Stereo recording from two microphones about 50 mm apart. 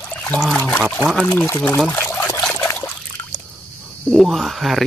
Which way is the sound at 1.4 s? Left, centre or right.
Left.